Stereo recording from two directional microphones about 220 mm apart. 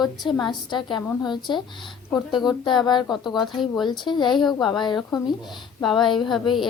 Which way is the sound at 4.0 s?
20° left (ahead or behind).